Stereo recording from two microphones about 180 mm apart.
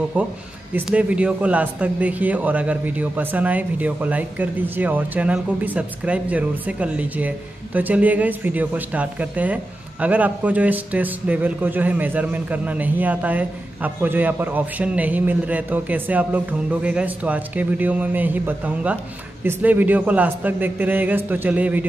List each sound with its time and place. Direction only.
0.7 s speech: 5° right (ahead or behind)